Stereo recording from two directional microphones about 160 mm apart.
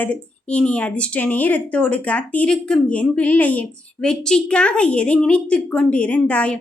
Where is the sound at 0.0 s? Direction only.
5° left (ahead or behind).